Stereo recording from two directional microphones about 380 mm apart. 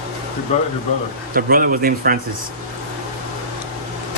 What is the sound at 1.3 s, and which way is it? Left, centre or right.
Speech, right.